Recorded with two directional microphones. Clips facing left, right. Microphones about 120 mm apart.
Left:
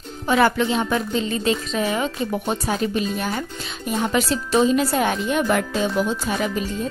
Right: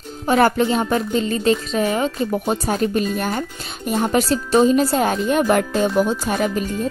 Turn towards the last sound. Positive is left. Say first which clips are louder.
# right 3 dB
turn(degrees=-45)  # may be behind; listen again after turning